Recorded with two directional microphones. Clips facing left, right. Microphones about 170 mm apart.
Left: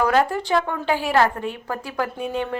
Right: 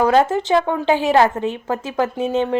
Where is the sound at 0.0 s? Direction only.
25° right (ahead or behind).